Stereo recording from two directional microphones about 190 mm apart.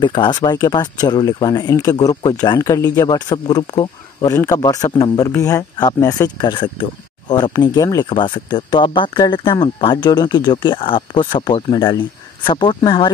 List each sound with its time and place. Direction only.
0.0 s speech: 25° left (ahead or behind)